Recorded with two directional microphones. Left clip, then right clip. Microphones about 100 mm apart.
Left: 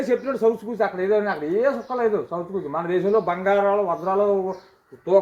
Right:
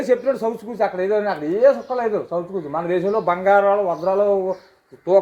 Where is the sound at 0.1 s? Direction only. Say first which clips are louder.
Right 2 dB; 15° right (ahead or behind).